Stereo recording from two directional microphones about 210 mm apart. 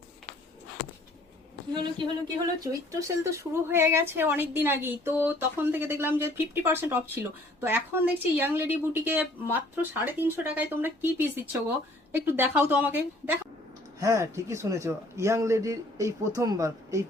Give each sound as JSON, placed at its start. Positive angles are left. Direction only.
{"t": 1.7, "sound": "a man's voice", "side_deg": -20}